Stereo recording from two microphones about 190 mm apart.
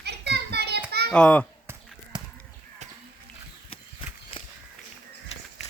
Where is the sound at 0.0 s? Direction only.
60° right (ahead or behind).